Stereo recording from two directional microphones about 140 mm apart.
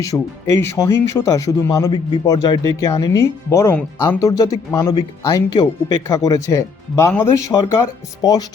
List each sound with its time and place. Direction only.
0.1 s speech: 15° left (ahead or behind)
1.9 s speech: 35° left (ahead or behind)